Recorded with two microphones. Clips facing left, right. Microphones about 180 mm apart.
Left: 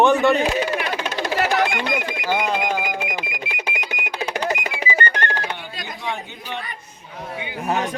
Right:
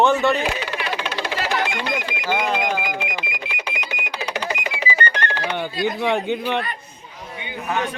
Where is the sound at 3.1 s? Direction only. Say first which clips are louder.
Left 1 dB; 45° left (ahead or behind).